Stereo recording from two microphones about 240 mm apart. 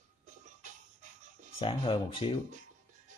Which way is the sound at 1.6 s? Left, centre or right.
Left.